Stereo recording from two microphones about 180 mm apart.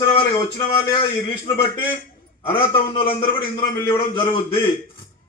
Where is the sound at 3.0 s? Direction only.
30° left (ahead or behind).